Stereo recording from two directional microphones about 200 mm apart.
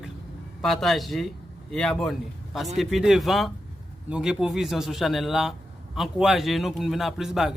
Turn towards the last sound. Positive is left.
turn(degrees=0)  # may be behind; listen again after turning